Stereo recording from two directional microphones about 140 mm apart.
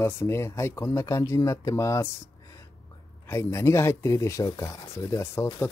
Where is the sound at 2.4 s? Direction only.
25° left (ahead or behind).